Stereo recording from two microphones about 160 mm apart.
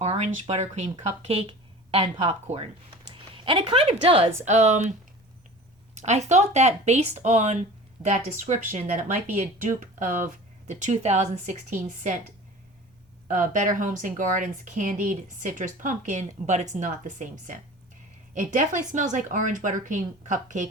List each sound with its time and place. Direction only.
0.0 s a woman's voice: 45° right (ahead or behind)
4.4 s speech: 45° right (ahead or behind)
13.2 s speech: 55° right (ahead or behind)